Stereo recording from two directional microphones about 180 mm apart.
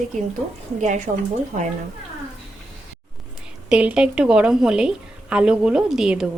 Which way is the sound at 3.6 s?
5° right (ahead or behind).